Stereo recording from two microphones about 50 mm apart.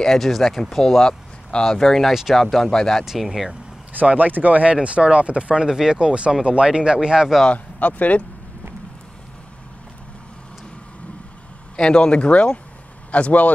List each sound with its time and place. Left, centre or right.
0.0 s speech: centre
3.1 s speech: centre
4.1 s speech: right; by 7.3 s centre
7.4 s speech: left
11.7 s speech: centre